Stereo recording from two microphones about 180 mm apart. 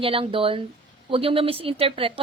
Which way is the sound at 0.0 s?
30° right (ahead or behind).